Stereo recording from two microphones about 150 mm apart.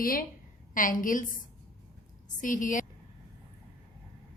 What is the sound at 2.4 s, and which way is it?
Speech, 60° left (ahead or behind).